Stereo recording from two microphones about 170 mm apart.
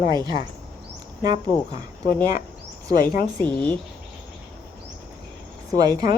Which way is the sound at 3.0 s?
60° left (ahead or behind).